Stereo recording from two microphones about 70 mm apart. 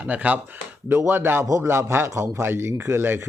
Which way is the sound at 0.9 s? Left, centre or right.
Right.